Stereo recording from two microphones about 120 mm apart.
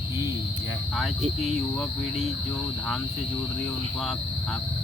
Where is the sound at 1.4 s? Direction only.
Centre (ahead or behind).